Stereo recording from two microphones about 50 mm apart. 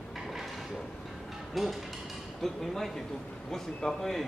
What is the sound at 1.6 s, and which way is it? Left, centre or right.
A man's voice, centre.